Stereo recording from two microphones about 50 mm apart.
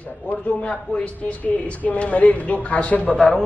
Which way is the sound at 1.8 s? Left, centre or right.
Left.